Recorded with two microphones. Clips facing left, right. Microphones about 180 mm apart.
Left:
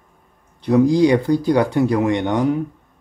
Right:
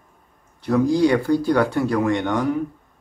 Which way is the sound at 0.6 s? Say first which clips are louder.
Left 3 dB; 15° left (ahead or behind).